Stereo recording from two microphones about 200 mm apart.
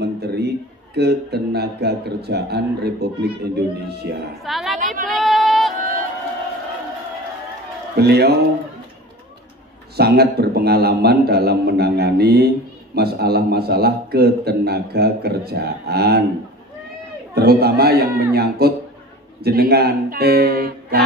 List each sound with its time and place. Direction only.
0.0 s a sound: 55° right (ahead or behind)
0.9 s speech: 55° right (ahead or behind)
4.4 s a woman's voice: centre (ahead or behind)
5.0 s a sound: centre (ahead or behind)
8.0 s a man's voice: 55° right (ahead or behind)
9.9 s a man's voice: 50° right (ahead or behind)
17.3 s a man's voice: 50° right (ahead or behind)